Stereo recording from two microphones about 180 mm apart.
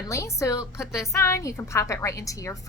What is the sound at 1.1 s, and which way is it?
A woman's voice, 15° left (ahead or behind).